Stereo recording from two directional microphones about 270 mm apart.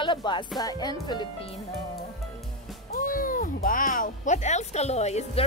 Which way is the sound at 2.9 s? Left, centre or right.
Left.